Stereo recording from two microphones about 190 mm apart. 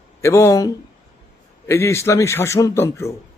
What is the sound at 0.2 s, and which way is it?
A man's voice, 15° left (ahead or behind).